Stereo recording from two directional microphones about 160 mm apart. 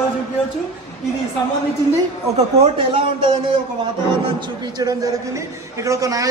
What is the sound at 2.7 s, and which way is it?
Speech, 35° right (ahead or behind).